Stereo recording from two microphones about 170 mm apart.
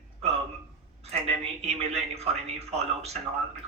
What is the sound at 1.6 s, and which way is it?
A man's voice, 40° right (ahead or behind).